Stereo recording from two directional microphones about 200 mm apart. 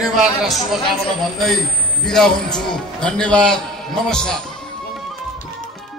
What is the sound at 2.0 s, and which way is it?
A man's voice, 5° left (ahead or behind).